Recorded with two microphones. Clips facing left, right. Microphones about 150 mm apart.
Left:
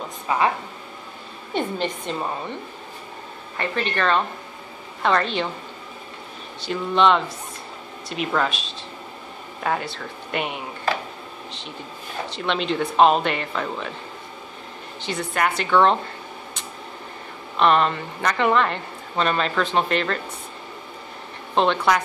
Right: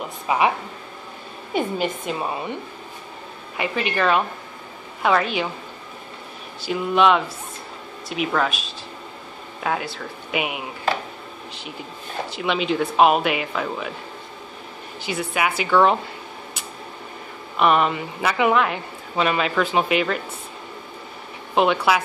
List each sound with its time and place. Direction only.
0.3 s a woman's voice: 15° right (ahead or behind)
1.5 s a woman's voice: 10° right (ahead or behind)
3.5 s a woman's voice: 10° right (ahead or behind)
6.6 s speech: 5° right (ahead or behind)
12.3 s speech: 5° right (ahead or behind)
15.0 s speech: 5° right (ahead or behind)
17.6 s a woman's voice: 5° right (ahead or behind)
21.5 s a woman's voice: 5° right (ahead or behind)